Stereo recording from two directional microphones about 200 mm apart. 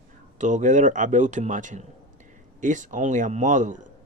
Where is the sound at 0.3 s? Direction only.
40° right (ahead or behind).